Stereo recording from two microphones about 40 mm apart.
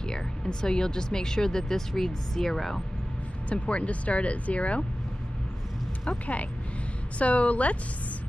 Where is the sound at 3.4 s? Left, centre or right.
Left.